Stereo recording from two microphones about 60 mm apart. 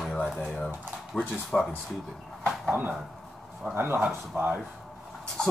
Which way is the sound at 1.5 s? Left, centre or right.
Centre.